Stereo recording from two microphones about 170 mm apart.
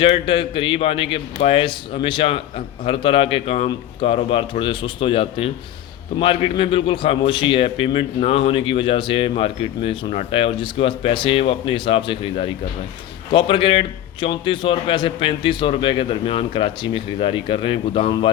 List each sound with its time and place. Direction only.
0.0 s a man's voice: 30° left (ahead or behind)